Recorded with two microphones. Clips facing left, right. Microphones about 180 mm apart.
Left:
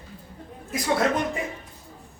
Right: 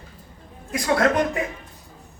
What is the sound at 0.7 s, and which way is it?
Speech, 65° right (ahead or behind).